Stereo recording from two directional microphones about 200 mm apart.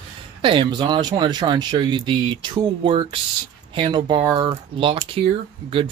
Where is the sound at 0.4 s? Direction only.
25° right (ahead or behind).